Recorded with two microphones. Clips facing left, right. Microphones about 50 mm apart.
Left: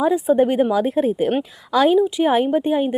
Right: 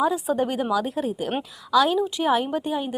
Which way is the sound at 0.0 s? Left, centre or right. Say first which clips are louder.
Left 6 dB; left.